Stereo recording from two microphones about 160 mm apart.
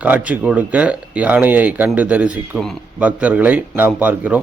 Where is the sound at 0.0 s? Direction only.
10° right (ahead or behind).